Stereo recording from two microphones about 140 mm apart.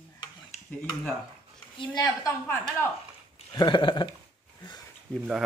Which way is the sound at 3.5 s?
30° left (ahead or behind).